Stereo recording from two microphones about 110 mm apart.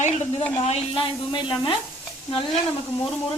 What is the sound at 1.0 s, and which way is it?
Speech, 50° left (ahead or behind).